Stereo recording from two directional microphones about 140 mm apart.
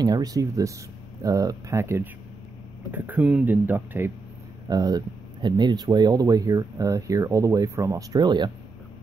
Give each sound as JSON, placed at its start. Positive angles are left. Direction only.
{"t": 0.0, "sound": "speech", "side_deg": -25}
{"t": 4.6, "sound": "speech", "side_deg": -25}